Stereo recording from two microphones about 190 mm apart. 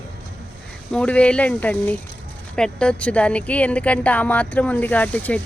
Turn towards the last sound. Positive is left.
turn(degrees=5)  # may be behind; listen again after turning